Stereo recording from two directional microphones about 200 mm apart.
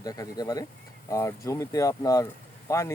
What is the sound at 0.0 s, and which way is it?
Speech, 20° left (ahead or behind).